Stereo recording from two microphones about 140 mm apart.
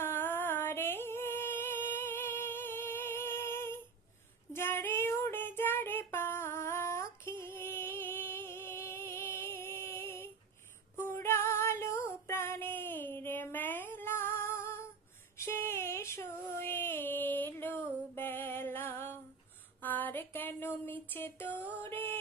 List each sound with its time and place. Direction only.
0.0 s music: 15° left (ahead or behind)
4.5 s female singing: 15° left (ahead or behind)
10.9 s music: 20° left (ahead or behind)
15.4 s a sound: 15° left (ahead or behind)
21.6 s music: 15° left (ahead or behind)